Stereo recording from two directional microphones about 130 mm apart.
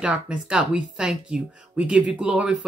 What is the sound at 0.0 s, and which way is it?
Speech, 10° right (ahead or behind).